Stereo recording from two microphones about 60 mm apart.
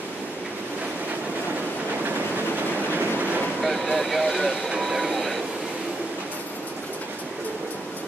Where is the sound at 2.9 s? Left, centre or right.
Right.